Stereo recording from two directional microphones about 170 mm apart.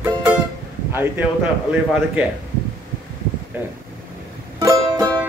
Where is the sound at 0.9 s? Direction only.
10° right (ahead or behind).